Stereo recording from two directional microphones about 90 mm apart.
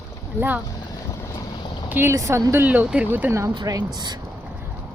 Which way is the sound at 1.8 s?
20° right (ahead or behind).